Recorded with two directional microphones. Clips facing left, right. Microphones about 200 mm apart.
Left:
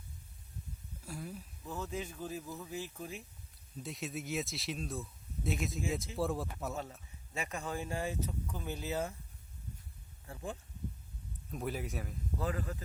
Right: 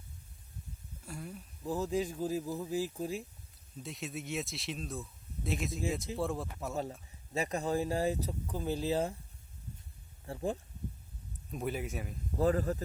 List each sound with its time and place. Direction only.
1.0 s speech: centre (ahead or behind)
1.6 s speech: 35° right (ahead or behind)
3.8 s speech: centre (ahead or behind)
7.3 s speech: 35° right (ahead or behind)
10.2 s speech: 35° right (ahead or behind)
11.5 s speech: centre (ahead or behind)
12.4 s speech: 40° right (ahead or behind)